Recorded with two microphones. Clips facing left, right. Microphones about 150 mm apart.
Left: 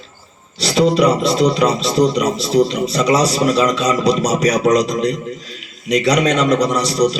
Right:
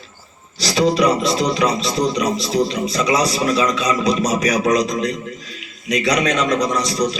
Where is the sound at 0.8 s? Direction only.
30° left (ahead or behind).